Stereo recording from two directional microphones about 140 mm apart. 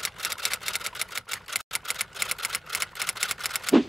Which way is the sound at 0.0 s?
Centre (ahead or behind).